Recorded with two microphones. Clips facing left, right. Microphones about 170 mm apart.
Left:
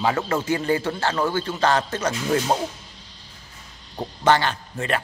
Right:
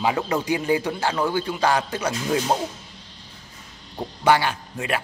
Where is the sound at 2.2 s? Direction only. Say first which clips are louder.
Left 1 dB; centre (ahead or behind).